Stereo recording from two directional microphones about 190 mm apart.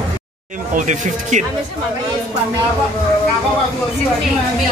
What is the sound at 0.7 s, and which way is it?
Speech, 40° right (ahead or behind).